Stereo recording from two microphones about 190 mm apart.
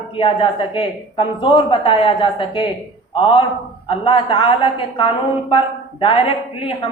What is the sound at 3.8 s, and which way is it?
A woman's voice, 25° left (ahead or behind).